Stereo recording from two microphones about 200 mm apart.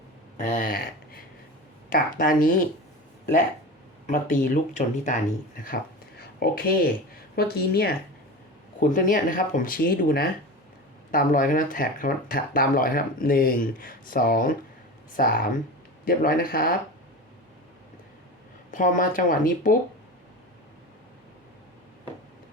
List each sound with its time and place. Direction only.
0.3 s speech: 40° left (ahead or behind)
4.0 s speech: 40° left (ahead or behind)
6.1 s speech: 50° left (ahead or behind)
18.7 s speech: 40° left (ahead or behind)